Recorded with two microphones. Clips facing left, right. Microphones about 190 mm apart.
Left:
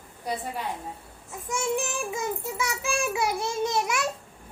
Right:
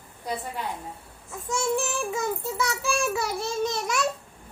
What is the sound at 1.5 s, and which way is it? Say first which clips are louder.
A child's voice: right 2 dB; 15° left (ahead or behind).